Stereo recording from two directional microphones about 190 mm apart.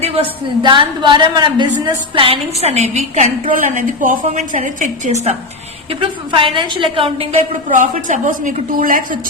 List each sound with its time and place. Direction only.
0.0 s a woman's voice: 30° right (ahead or behind)
7.7 s a woman's voice: 45° right (ahead or behind)